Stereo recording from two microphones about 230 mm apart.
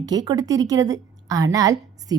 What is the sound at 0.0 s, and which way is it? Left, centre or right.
A woman's voice, centre.